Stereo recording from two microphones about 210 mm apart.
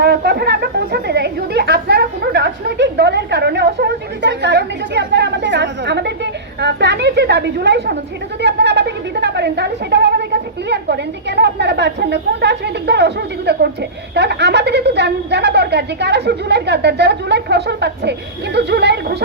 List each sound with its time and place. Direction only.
0.0 s a woman's voice: 50° right (ahead or behind)